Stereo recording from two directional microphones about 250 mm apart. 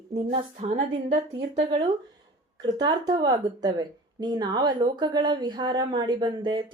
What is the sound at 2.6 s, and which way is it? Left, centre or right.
Speech, centre.